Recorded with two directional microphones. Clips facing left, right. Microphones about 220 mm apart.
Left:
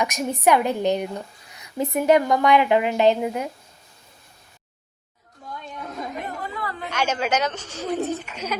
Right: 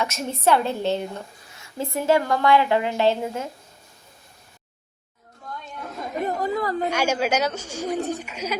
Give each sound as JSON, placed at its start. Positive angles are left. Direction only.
{"t": 0.0, "sound": "a woman's voice", "side_deg": 15}
{"t": 6.1, "sound": "a sound", "side_deg": -40}
{"t": 6.9, "sound": "speech", "side_deg": -10}